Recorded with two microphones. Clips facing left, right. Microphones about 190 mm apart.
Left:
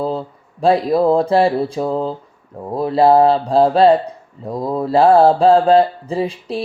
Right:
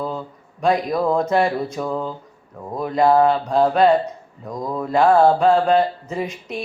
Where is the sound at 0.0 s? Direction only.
30° left (ahead or behind).